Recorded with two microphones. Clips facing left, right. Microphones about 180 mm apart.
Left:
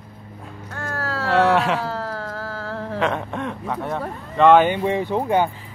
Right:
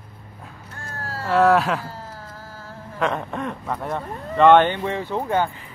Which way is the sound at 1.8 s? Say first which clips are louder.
Left 9 dB; 75° left (ahead or behind).